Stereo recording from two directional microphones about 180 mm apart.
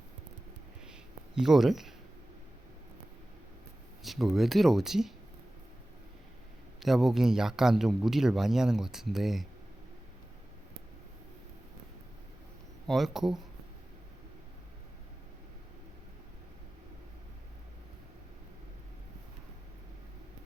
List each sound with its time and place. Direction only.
1.4 s speech: centre (ahead or behind)
4.0 s speech: centre (ahead or behind)
6.7 s speech: centre (ahead or behind)
12.9 s speech: centre (ahead or behind)